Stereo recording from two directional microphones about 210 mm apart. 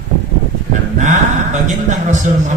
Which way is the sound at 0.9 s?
35° right (ahead or behind).